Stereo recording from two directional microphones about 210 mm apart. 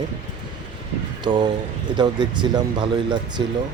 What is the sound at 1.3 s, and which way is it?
Speech, 20° right (ahead or behind).